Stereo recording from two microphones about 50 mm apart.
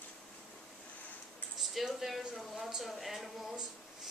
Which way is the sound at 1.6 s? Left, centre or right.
Centre.